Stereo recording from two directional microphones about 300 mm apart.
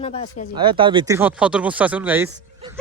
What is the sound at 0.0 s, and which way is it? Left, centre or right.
Speech, centre.